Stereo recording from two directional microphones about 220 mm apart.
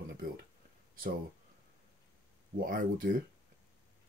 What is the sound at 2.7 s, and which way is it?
Speech, 40° right (ahead or behind).